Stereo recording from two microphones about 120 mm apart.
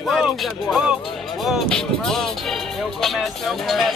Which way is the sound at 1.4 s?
Centre (ahead or behind).